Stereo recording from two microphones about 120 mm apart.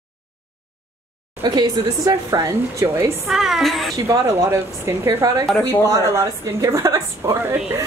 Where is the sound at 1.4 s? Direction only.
35° right (ahead or behind).